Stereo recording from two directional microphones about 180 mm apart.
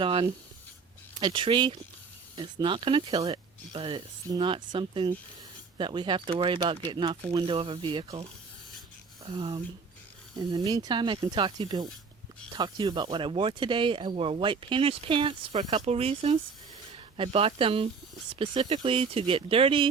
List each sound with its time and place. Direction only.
0.0 s speech: 30° right (ahead or behind)
10.3 s speech: 20° right (ahead or behind)